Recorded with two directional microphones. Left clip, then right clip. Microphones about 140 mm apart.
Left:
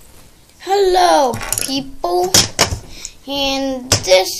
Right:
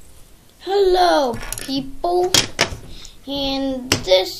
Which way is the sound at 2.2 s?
20° left (ahead or behind).